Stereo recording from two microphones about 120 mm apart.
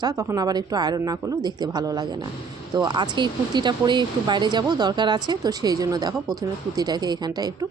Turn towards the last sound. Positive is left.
turn(degrees=-35)  # may be behind; listen again after turning